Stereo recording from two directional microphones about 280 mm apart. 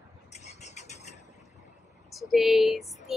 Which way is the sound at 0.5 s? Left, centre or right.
Left.